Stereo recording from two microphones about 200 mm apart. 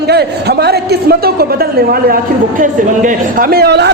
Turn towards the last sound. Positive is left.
turn(degrees=-55)  # may be behind; listen again after turning